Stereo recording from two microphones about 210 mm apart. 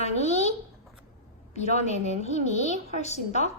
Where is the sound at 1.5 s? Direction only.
30° left (ahead or behind).